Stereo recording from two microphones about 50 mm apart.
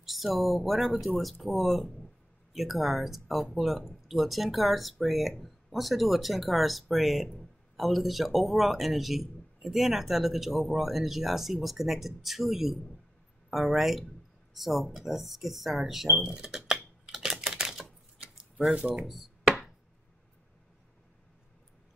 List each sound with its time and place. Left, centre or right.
0.0 s speech: centre
17.0 s typing: centre
18.7 s speech: right